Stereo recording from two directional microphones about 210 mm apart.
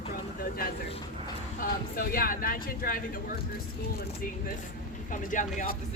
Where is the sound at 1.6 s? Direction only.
45° left (ahead or behind).